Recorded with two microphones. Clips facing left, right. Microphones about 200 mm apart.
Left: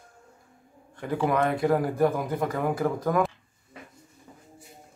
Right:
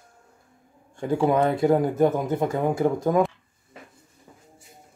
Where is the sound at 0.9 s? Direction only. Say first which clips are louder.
Right 4 dB; 25° right (ahead or behind).